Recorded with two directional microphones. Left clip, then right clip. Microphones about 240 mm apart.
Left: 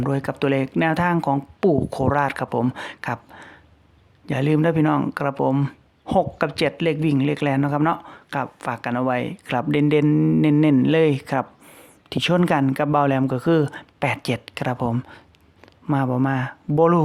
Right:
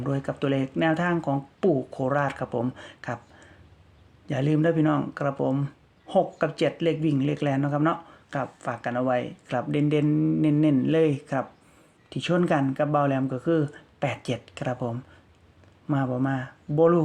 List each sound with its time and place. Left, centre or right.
0.0 s speech: left